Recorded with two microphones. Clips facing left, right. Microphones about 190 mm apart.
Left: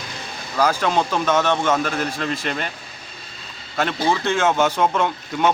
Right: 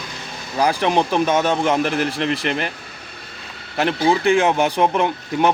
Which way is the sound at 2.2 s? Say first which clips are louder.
Right 4 dB; 65° right (ahead or behind).